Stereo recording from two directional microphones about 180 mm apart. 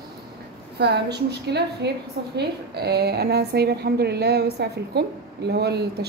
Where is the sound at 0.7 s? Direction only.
65° right (ahead or behind).